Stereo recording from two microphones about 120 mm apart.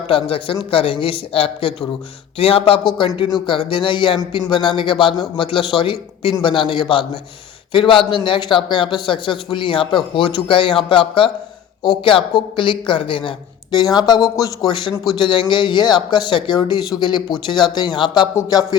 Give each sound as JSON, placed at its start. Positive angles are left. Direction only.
{"t": 0.1, "sound": "speech", "side_deg": 50}
{"t": 13.9, "sound": "speech", "side_deg": 30}